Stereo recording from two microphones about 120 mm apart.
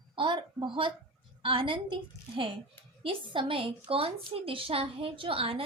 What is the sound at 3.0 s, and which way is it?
A woman's voice, 45° right (ahead or behind).